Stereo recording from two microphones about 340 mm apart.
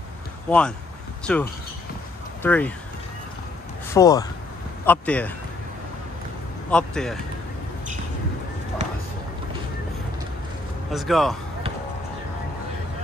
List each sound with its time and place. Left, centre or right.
0.5 s speech: centre
3.9 s speech: centre
6.7 s speech: centre
8.8 s a sound: centre
10.9 s speech: centre